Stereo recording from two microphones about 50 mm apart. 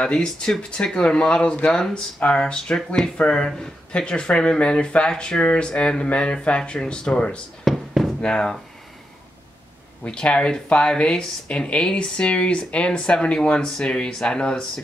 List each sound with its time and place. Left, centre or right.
0.0 s speech: centre
7.7 s a sound: centre
8.2 s speech: centre
10.0 s speech: centre